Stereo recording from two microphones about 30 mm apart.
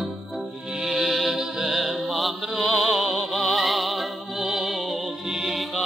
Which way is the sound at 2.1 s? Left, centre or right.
Centre.